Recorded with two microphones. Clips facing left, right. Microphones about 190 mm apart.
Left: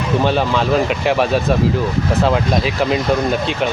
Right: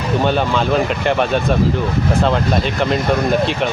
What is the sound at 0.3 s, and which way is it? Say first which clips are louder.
Speech: even; centre (ahead or behind).